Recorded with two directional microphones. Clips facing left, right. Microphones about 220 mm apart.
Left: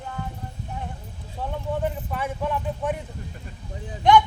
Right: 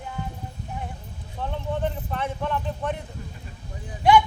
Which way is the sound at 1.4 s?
10° left (ahead or behind).